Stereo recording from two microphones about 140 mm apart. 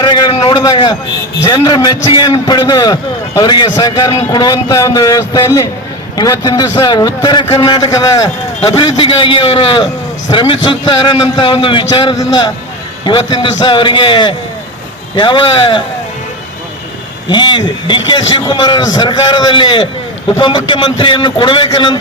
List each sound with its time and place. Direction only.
0.0 s a sound: 35° left (ahead or behind)
1.5 s a man's voice: 30° left (ahead or behind)
8.7 s a man's voice: 35° left (ahead or behind)
17.2 s a man's voice: 35° left (ahead or behind)